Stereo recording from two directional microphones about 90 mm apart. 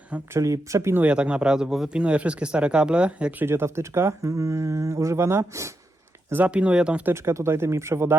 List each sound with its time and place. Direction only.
0.3 s speech: 35° right (ahead or behind)
1.0 s speech: 10° right (ahead or behind)
3.4 s speech: 30° right (ahead or behind)
6.3 s speech: 15° right (ahead or behind)
7.1 s speech: 30° right (ahead or behind)